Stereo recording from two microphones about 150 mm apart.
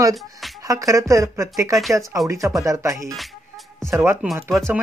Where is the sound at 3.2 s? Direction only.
Centre (ahead or behind).